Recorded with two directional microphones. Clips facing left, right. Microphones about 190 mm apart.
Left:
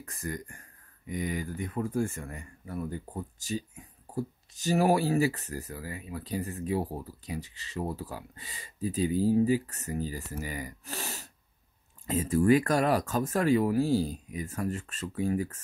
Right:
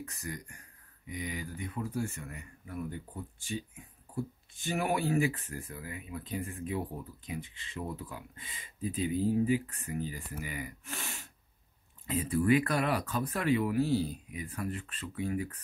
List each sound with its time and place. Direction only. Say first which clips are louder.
0.1 s speech: left 5 dB; 50° left (ahead or behind)